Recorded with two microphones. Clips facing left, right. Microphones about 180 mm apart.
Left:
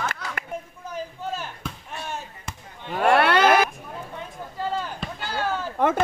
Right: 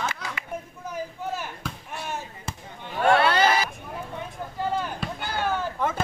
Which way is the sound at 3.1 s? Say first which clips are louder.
Left 2 dB; 60° left (ahead or behind).